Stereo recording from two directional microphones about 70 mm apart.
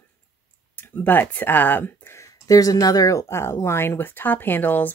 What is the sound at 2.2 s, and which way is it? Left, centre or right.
Speech, left.